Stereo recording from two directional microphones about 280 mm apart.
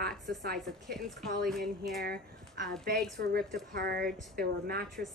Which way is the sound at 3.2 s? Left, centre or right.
Right.